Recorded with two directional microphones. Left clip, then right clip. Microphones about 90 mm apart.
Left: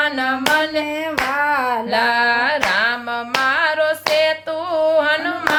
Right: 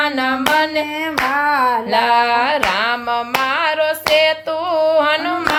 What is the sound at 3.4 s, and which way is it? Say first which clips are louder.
Hands: left 3 dB; 40° right (ahead or behind).